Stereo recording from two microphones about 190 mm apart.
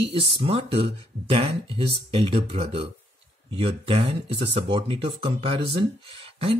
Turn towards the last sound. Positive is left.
turn(degrees=-30)  # may be behind; listen again after turning